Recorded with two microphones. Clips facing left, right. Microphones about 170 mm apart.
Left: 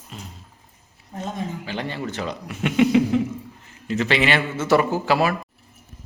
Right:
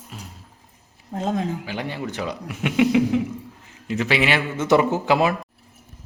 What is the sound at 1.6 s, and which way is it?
Speech, 10° right (ahead or behind).